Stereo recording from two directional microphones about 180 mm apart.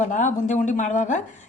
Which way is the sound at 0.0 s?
45° left (ahead or behind).